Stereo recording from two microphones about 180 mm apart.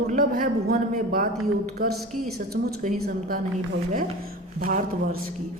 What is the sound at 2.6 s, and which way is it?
Speech, 50° right (ahead or behind).